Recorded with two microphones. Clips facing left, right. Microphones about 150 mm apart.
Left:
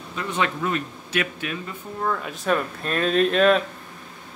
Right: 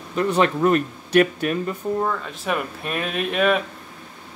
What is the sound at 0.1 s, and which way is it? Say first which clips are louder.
Speech: right 7 dB; 45° right (ahead or behind).